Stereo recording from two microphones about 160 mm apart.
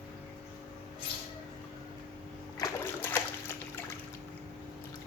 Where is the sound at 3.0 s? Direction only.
15° left (ahead or behind).